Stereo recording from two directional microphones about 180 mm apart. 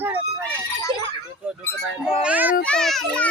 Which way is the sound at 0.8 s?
15° left (ahead or behind).